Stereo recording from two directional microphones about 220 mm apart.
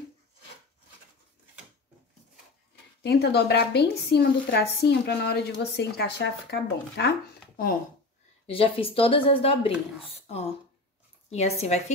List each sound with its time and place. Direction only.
3.0 s a woman's voice: 50° left (ahead or behind)
8.5 s speech: 25° left (ahead or behind)